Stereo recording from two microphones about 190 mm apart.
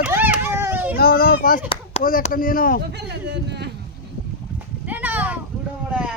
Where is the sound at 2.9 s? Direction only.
65° right (ahead or behind).